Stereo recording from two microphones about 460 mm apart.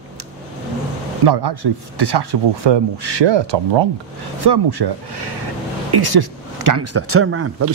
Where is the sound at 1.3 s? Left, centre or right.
Right.